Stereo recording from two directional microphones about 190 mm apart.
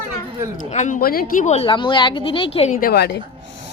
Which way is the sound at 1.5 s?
30° left (ahead or behind).